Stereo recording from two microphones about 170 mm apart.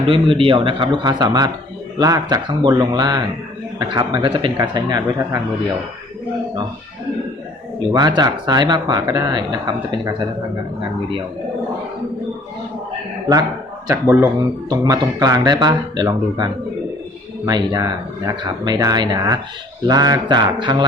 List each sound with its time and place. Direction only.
0.1 s speech: 30° right (ahead or behind)
7.9 s speech: 25° right (ahead or behind)
13.8 s speech: 15° right (ahead or behind)